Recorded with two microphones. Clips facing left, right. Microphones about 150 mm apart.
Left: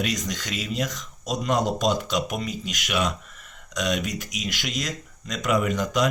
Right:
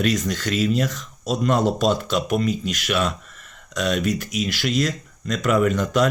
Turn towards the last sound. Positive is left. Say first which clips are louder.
# right 4 dB
turn(degrees=15)  # may be behind; listen again after turning